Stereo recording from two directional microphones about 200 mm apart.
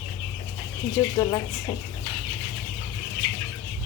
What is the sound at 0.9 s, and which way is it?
Speech, 20° left (ahead or behind).